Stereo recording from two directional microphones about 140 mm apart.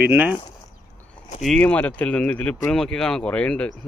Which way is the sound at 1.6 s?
10° left (ahead or behind).